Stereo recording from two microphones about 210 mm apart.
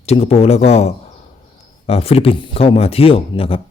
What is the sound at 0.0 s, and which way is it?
Speech, 30° left (ahead or behind).